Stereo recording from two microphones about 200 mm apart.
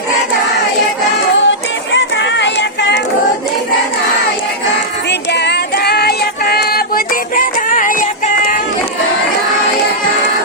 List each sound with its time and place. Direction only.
1.5 s music: 65° left (ahead or behind)
5.3 s music: 55° left (ahead or behind)